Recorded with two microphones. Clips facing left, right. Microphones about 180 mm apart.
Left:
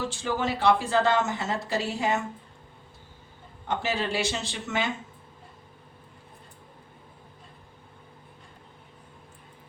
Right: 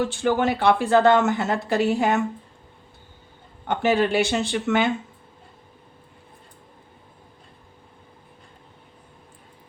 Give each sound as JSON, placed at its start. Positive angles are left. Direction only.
{"t": 0.0, "sound": "speech", "side_deg": -60}
{"t": 3.7, "sound": "speech", "side_deg": -60}